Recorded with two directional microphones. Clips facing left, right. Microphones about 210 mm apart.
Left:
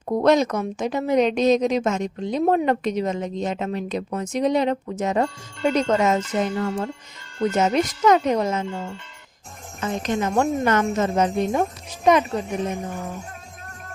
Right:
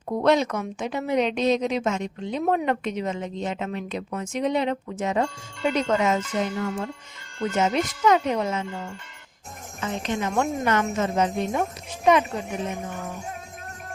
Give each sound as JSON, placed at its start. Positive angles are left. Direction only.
{"t": 0.2, "sound": "a woman's voice", "side_deg": 40}
{"t": 9.8, "sound": "a woman's voice", "side_deg": 40}